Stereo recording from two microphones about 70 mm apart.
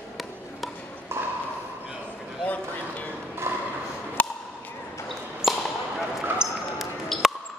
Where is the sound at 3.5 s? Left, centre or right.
Right.